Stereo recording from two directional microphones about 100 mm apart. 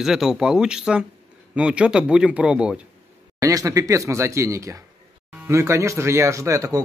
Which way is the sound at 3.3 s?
35° right (ahead or behind).